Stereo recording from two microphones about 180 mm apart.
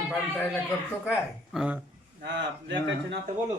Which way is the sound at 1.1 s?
5° right (ahead or behind).